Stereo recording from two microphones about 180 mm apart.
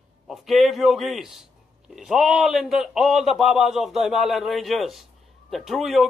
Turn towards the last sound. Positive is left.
turn(degrees=0)  # may be behind; listen again after turning